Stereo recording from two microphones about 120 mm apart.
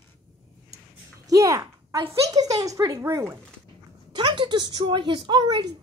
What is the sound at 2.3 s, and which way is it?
Speech, 30° right (ahead or behind).